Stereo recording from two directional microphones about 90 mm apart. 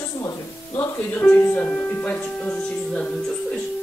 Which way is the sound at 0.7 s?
20° left (ahead or behind).